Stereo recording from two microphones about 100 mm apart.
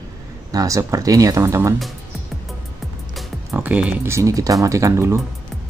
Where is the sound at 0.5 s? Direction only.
35° right (ahead or behind).